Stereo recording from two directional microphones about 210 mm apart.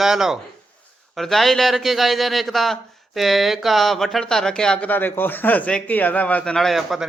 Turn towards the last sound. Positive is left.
turn(degrees=0)  # may be behind; listen again after turning